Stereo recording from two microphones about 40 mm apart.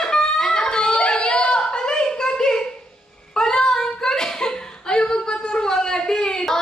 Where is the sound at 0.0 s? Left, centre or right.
Centre.